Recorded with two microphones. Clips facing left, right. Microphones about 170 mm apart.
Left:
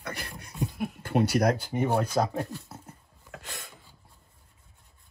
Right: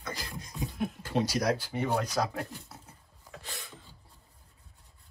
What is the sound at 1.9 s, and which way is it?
Speech, 35° left (ahead or behind).